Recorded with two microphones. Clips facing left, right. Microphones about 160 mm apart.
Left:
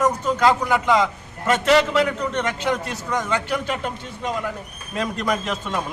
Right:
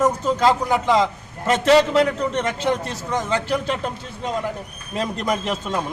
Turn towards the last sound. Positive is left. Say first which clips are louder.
# right 1 dB
turn(degrees=-25)  # may be behind; listen again after turning